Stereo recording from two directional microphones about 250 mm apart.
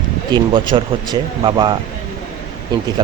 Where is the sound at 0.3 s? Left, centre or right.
Centre.